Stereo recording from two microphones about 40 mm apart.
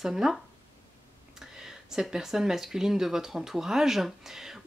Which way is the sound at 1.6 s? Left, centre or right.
Centre.